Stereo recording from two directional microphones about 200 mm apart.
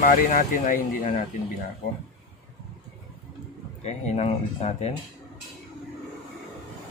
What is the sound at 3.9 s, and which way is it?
Speech, 35° left (ahead or behind).